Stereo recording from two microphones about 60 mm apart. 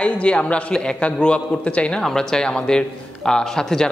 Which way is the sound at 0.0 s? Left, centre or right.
Centre.